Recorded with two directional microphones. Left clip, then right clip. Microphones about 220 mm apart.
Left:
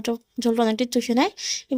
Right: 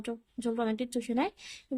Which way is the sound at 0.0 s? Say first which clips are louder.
Left 11 dB; 30° left (ahead or behind).